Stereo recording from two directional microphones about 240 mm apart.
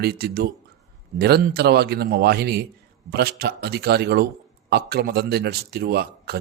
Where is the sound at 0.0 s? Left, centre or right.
Right.